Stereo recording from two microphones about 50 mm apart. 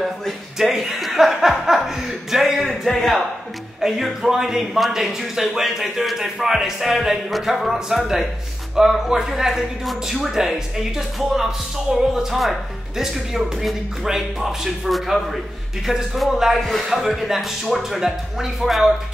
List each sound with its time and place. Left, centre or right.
0.0 s a man's voice: centre
3.8 s a man's voice: centre